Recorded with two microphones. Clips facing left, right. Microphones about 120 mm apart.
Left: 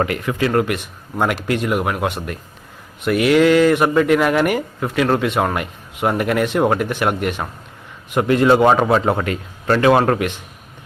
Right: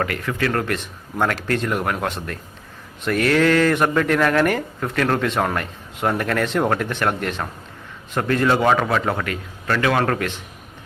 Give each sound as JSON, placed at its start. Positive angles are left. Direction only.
{"t": 0.0, "sound": "a man's voice", "side_deg": 20}
{"t": 10.0, "sound": "speech", "side_deg": 15}